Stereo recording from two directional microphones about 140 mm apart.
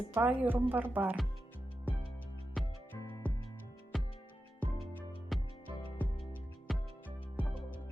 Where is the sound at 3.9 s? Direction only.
Centre (ahead or behind).